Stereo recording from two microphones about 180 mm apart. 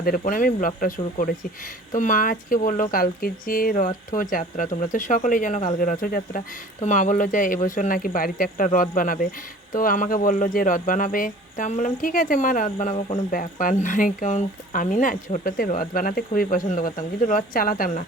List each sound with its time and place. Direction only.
0.0 s speech: 50° left (ahead or behind)
6.7 s speech: 40° left (ahead or behind)